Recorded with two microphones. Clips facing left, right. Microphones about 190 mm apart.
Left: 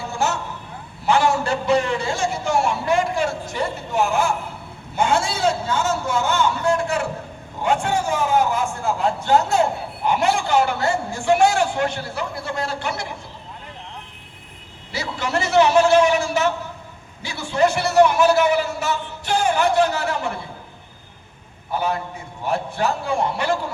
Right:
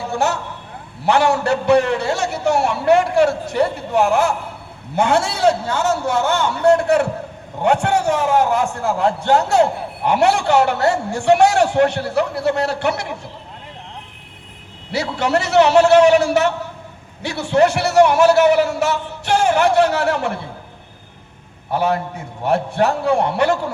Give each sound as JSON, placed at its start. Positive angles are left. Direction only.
{"t": 0.1, "sound": "vehicle", "side_deg": -65}
{"t": 1.0, "sound": "a sound", "side_deg": -65}
{"t": 4.9, "sound": "a man's voice", "side_deg": -65}
{"t": 14.9, "sound": "a man's voice", "side_deg": -65}
{"t": 21.7, "sound": "a man's voice", "side_deg": -70}